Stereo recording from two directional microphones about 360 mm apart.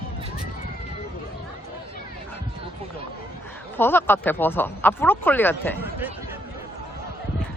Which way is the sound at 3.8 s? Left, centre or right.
Centre.